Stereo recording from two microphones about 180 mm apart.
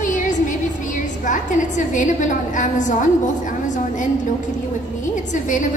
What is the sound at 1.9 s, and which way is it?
A woman's voice, 45° left (ahead or behind).